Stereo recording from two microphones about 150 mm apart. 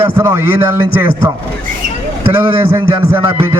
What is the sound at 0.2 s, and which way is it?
Music, 15° right (ahead or behind).